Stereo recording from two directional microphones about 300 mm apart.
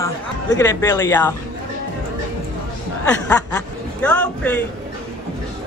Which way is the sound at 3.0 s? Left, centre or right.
Centre.